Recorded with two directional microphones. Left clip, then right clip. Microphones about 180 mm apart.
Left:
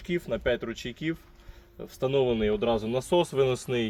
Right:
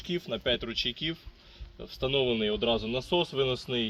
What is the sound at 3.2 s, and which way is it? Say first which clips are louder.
Speech: left 4 dB; 50° left (ahead or behind).